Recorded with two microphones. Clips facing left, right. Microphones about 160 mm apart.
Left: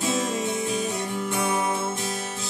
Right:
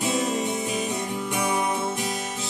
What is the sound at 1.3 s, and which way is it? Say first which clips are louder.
Music: even; 15° right (ahead or behind).